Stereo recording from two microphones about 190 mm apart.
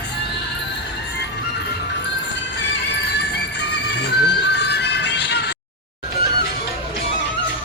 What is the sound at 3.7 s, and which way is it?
Music, 60° left (ahead or behind).